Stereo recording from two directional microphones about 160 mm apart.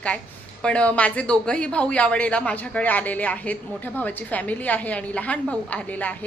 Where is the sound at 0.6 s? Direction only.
5° left (ahead or behind).